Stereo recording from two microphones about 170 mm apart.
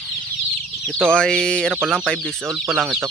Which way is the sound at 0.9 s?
5° left (ahead or behind).